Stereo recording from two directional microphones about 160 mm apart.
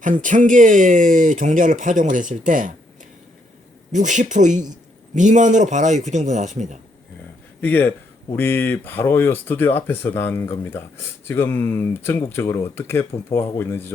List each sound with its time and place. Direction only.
0.0 s speech: 55° right (ahead or behind)
3.9 s speech: 50° right (ahead or behind)
7.6 s speech: 10° left (ahead or behind)